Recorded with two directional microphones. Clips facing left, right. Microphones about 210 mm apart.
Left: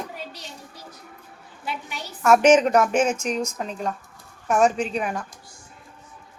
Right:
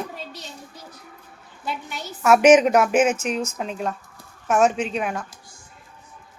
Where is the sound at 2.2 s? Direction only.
10° right (ahead or behind).